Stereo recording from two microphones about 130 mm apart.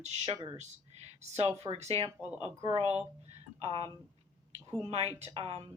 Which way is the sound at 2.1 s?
10° right (ahead or behind).